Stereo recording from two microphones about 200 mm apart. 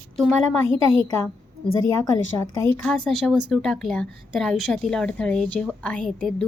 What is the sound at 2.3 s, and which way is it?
Speech, 15° left (ahead or behind).